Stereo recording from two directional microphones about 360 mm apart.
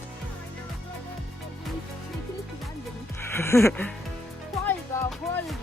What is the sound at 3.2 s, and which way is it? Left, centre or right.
Speech, centre.